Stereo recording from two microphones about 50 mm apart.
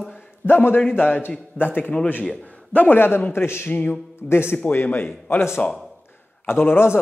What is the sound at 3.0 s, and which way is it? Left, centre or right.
Speech, left.